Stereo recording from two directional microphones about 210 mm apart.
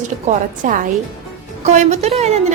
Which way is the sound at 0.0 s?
35° right (ahead or behind).